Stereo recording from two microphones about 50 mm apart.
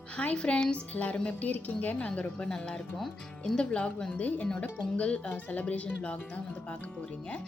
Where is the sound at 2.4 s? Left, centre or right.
Centre.